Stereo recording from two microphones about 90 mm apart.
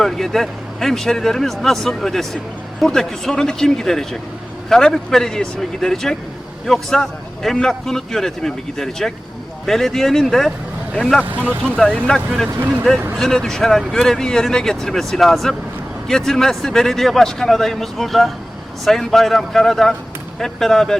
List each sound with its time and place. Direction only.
0.0 s a man's voice: 5° left (ahead or behind)
11.3 s speech: 20° right (ahead or behind)
11.8 s a man's voice: 5° left (ahead or behind)